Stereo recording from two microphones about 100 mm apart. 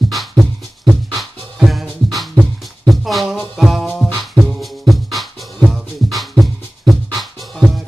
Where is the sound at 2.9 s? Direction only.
Centre (ahead or behind).